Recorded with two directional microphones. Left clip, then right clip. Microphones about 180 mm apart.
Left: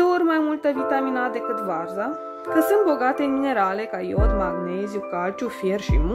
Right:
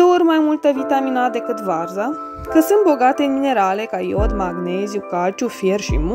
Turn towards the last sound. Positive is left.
turn(degrees=-30)  # may be behind; listen again after turning